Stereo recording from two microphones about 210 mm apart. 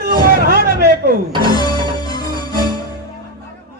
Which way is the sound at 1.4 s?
20° left (ahead or behind).